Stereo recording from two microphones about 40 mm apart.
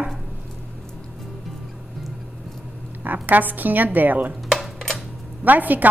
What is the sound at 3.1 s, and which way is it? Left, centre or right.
A woman's voice, right.